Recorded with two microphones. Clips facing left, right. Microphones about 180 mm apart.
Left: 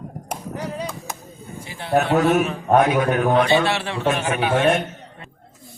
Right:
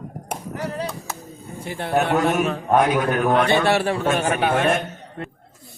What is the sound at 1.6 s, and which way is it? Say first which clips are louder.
Speech: left 1 dB; 55° right (ahead or behind).